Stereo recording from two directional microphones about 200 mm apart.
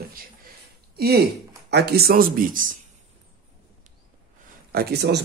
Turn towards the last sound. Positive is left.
turn(degrees=-55)  # may be behind; listen again after turning